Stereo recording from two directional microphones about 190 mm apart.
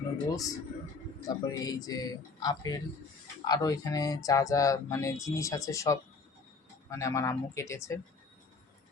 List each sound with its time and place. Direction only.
0.3 s speech: 20° left (ahead or behind)